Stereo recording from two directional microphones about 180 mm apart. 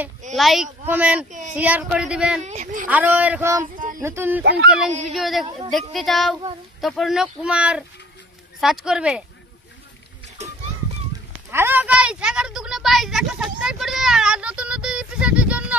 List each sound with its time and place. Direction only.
0.4 s a woman's voice: centre (ahead or behind)
2.4 s a woman's voice: 40° right (ahead or behind)
2.9 s speech: 10° right (ahead or behind)
3.7 s a sound: 50° right (ahead or behind)
4.0 s speech: 15° right (ahead or behind)
4.4 s speech: 70° right (ahead or behind)
5.1 s a woman's voice: centre (ahead or behind)
11.5 s a woman's voice: 10° right (ahead or behind)